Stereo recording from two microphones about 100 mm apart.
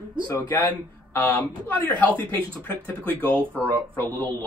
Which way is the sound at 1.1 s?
15° left (ahead or behind).